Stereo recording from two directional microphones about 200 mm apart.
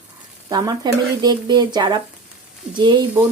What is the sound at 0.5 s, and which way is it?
Speech, 20° right (ahead or behind).